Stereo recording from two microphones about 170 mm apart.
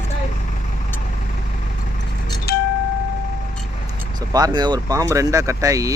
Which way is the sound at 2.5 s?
65° left (ahead or behind).